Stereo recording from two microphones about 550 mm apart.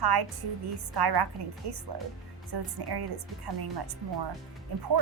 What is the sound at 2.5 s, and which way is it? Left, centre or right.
Speech, right.